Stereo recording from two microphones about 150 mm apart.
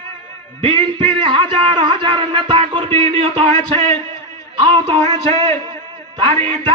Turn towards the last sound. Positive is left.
turn(degrees=-30)  # may be behind; listen again after turning